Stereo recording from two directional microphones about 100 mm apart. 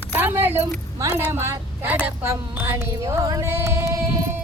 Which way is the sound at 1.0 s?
25° right (ahead or behind).